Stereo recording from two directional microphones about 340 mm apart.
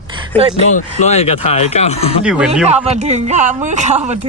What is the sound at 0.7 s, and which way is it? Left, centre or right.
Speech, centre.